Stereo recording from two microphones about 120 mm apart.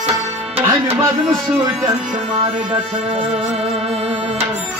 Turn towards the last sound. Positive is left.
turn(degrees=-50)  # may be behind; listen again after turning